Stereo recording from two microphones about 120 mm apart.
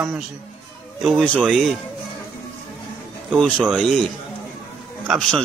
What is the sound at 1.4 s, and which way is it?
Speech, centre (ahead or behind).